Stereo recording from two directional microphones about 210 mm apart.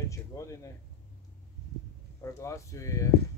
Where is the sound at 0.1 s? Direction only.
15° left (ahead or behind).